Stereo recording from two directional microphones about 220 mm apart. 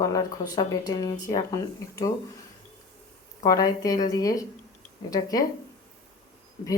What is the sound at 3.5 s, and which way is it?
A woman's voice, 15° left (ahead or behind).